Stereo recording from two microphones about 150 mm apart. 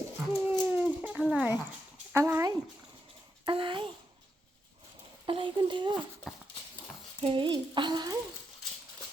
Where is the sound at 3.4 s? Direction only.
35° right (ahead or behind).